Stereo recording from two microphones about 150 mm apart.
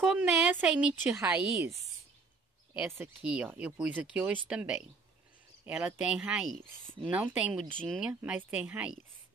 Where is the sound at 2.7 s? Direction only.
15° right (ahead or behind); by 6.9 s 5° left (ahead or behind).